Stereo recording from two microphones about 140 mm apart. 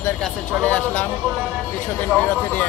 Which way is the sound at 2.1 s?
10° left (ahead or behind).